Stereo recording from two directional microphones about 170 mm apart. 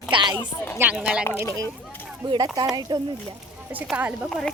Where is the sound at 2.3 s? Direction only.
25° right (ahead or behind).